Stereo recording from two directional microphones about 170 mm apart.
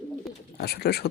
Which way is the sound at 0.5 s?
70° left (ahead or behind).